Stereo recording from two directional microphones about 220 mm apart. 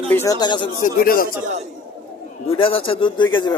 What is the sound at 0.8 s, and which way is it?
Speech, 40° left (ahead or behind).